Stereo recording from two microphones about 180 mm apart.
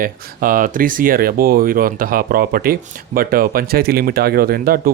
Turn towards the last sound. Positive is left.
turn(degrees=-55)  # may be behind; listen again after turning